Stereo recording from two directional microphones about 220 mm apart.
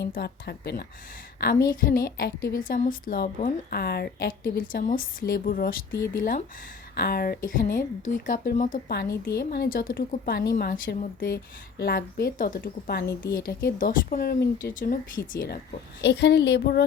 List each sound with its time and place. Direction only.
0.0 s a woman's voice: 50° left (ahead or behind)
5.9 s speech: 10° left (ahead or behind)
6.9 s a woman's voice: 45° left (ahead or behind)